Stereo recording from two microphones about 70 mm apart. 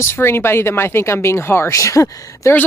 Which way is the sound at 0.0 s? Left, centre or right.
Left.